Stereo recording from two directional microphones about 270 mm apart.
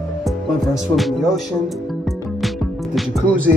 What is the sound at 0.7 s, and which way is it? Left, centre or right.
Speech, centre.